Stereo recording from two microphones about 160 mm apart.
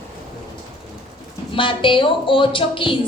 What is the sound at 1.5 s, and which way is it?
A woman's voice, 30° left (ahead or behind).